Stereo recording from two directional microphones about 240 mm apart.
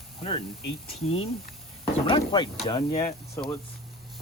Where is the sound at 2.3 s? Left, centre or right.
Centre.